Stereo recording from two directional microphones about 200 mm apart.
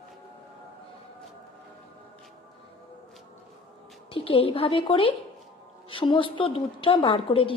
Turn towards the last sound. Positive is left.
turn(degrees=25)  # may be behind; listen again after turning